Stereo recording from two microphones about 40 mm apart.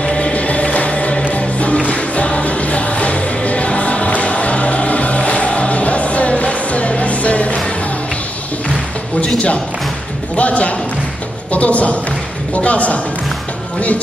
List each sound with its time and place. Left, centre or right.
0.0 s music: left
10.3 s a man's voice: left